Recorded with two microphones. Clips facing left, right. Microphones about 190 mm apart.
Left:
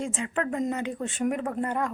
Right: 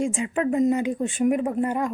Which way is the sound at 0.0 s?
15° right (ahead or behind).